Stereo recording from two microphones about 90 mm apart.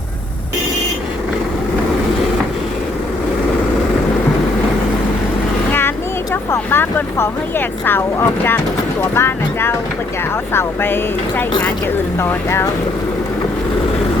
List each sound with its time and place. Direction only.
6.3 s vehicle: 25° left (ahead or behind)
7.9 s speech: 25° left (ahead or behind)